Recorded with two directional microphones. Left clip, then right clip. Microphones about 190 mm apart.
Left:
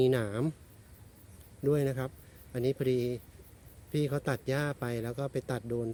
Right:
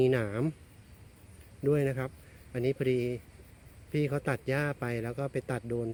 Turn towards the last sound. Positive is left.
turn(degrees=5)  # may be behind; listen again after turning